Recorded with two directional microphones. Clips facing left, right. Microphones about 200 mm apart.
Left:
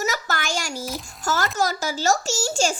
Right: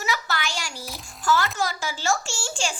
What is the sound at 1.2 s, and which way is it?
A child's voice, 45° left (ahead or behind).